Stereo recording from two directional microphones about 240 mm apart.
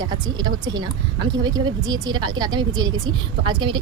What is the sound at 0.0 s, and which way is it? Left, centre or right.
A woman's voice, centre.